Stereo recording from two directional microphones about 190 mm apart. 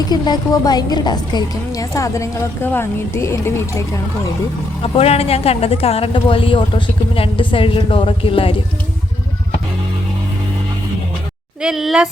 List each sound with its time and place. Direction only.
0.1 s a woman's voice: 20° left (ahead or behind)
4.8 s speech: 30° left (ahead or behind)
11.6 s speech: centre (ahead or behind)